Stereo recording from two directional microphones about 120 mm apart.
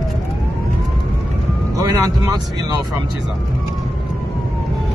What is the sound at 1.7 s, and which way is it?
Vehicle, 30° right (ahead or behind).